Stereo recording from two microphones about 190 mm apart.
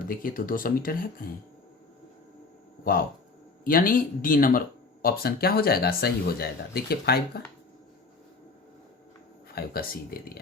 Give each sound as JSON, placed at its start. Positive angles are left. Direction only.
{"t": 0.0, "sound": "speech", "side_deg": 45}
{"t": 2.8, "sound": "speech", "side_deg": 50}
{"t": 9.6, "sound": "speech", "side_deg": 50}